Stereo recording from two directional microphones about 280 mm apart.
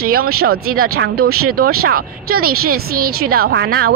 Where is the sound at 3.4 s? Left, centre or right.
Right.